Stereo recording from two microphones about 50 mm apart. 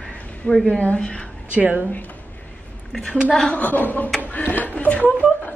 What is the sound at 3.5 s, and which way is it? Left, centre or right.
A woman's voice, left.